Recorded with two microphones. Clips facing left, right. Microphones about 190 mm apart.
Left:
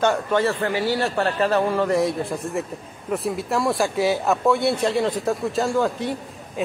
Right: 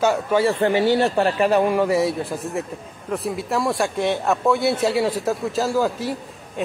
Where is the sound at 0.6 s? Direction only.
25° right (ahead or behind).